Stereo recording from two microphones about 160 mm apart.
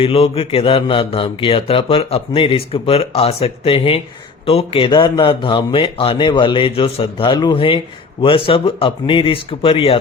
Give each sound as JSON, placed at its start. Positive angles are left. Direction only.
{"t": 0.0, "sound": "mantra", "side_deg": 35}